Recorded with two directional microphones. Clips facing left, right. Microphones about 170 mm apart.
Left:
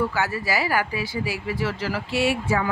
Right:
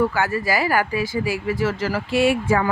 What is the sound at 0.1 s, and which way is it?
Speech, 50° right (ahead or behind).